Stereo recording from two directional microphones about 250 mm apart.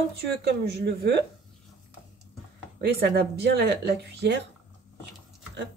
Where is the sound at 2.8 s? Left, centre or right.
Right.